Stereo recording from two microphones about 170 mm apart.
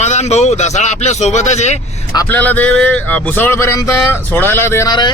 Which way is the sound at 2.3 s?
10° left (ahead or behind).